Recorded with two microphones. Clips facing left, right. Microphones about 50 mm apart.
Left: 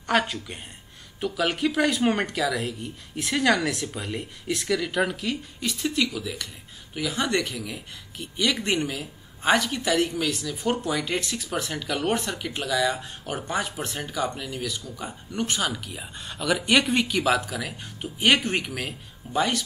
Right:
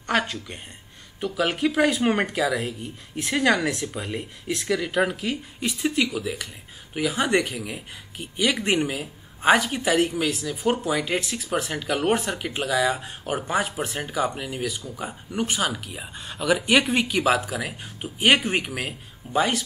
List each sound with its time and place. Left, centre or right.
0.0 s speech: centre